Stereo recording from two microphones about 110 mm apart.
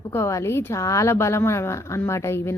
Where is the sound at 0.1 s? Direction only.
25° left (ahead or behind).